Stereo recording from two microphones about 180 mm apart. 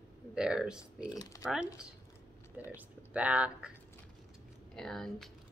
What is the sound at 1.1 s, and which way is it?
Speech, 20° left (ahead or behind).